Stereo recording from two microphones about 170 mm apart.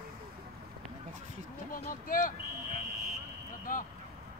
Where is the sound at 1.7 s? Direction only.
55° left (ahead or behind).